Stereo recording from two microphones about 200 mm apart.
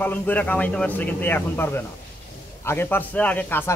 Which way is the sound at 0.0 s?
10° left (ahead or behind).